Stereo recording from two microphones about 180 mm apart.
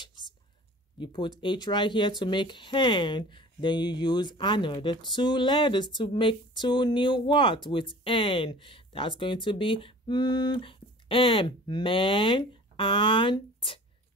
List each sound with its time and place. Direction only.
0.0 s whispering: 25° left (ahead or behind)
0.9 s speech: 25° left (ahead or behind)